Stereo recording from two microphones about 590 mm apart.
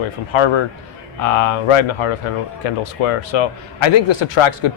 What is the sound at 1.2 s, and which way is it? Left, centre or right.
A man's voice, left.